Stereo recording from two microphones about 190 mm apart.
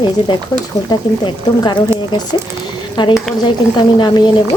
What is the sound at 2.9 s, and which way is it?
Speech, 25° left (ahead or behind).